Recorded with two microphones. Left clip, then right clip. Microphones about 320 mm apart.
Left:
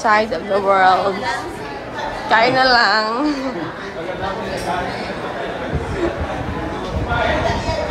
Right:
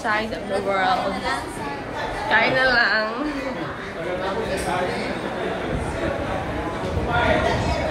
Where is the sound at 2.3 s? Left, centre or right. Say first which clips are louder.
Left 5 dB; centre.